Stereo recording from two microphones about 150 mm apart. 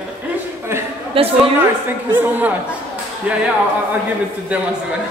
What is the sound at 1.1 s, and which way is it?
Speech, 40° right (ahead or behind).